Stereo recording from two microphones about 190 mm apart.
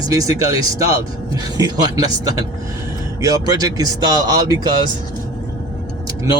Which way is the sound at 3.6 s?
20° right (ahead or behind).